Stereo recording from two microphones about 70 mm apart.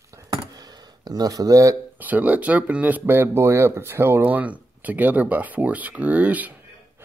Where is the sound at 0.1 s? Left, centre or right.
Right.